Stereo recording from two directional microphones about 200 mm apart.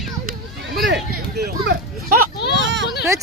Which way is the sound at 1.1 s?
50° right (ahead or behind).